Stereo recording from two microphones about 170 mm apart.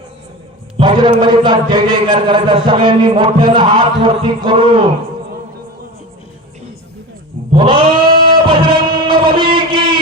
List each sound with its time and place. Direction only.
0.8 s a man's voice: 25° right (ahead or behind)
7.5 s goat: 30° right (ahead or behind)
8.4 s music: 30° right (ahead or behind)